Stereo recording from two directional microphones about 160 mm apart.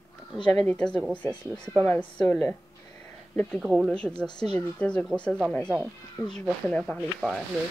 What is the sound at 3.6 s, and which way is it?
A woman's voice, 5° right (ahead or behind).